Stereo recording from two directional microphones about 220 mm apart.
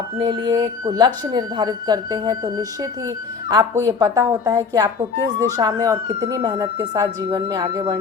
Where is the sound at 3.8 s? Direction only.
15° right (ahead or behind).